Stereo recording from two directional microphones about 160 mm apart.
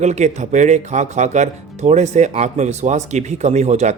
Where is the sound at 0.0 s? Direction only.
45° right (ahead or behind).